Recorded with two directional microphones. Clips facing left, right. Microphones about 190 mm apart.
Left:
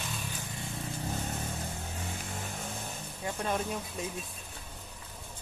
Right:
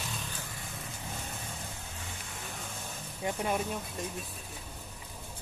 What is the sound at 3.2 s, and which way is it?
Speech, 10° right (ahead or behind).